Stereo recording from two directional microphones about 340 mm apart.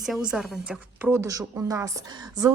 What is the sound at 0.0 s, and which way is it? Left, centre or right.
A woman's voice, centre.